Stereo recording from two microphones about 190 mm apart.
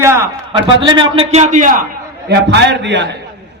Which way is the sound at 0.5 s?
30° right (ahead or behind).